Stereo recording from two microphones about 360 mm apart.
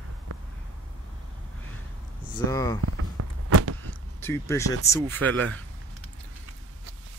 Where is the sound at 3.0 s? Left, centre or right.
Right.